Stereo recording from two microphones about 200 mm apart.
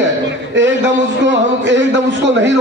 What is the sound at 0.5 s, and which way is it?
A man's voice, 60° right (ahead or behind).